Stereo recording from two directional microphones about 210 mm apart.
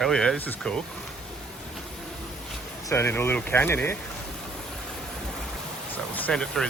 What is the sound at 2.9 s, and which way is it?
Speech, 10° left (ahead or behind).